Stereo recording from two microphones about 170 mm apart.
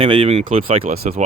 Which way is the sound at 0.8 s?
60° right (ahead or behind).